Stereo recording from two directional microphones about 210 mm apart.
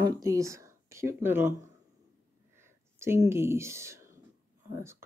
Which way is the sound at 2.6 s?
10° right (ahead or behind).